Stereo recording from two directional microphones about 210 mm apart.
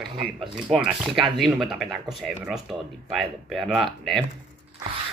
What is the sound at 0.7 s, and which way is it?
Speech, centre (ahead or behind).